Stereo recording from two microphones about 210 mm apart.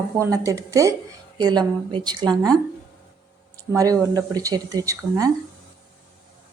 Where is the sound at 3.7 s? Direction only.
15° right (ahead or behind).